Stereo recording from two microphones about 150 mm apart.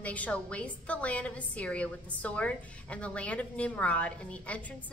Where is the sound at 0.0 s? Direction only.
10° left (ahead or behind).